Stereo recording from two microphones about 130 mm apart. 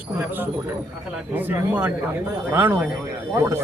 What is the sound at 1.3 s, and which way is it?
A man's voice, 15° right (ahead or behind).